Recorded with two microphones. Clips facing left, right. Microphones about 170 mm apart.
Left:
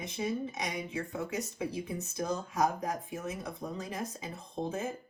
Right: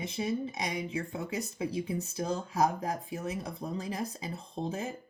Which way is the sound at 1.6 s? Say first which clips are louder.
Right 3 dB; 30° right (ahead or behind).